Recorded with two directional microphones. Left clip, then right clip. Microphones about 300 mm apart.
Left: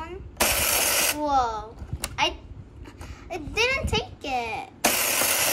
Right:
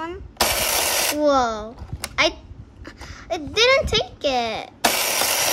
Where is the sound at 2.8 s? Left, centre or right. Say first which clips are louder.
Right 6 dB; centre.